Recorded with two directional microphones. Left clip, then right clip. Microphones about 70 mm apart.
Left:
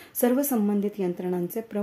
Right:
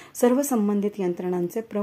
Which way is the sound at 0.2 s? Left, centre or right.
Right.